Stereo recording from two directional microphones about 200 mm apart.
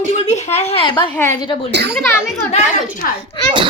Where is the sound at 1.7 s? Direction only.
55° right (ahead or behind).